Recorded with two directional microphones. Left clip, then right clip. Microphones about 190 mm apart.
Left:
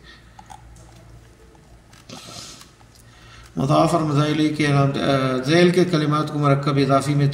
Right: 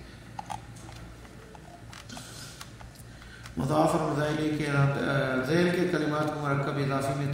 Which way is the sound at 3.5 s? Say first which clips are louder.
Left 7 dB; 35° left (ahead or behind).